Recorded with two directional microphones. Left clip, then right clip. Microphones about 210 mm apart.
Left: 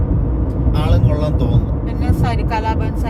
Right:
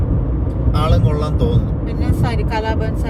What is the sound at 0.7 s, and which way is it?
Speech, 20° right (ahead or behind).